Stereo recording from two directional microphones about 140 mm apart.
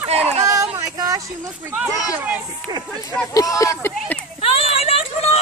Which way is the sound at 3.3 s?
25° left (ahead or behind).